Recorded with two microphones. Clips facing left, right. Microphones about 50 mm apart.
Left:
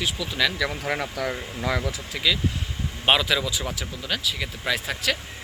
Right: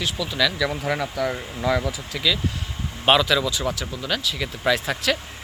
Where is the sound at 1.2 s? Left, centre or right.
Left.